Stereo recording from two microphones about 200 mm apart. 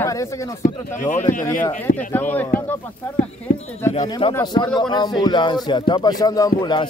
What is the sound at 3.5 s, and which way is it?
Speech, 50° left (ahead or behind).